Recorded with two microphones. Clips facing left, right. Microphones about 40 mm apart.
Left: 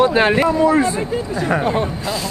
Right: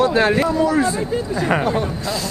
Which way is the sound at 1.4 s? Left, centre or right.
Right.